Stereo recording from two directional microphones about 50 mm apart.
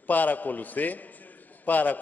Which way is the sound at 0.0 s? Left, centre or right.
Left.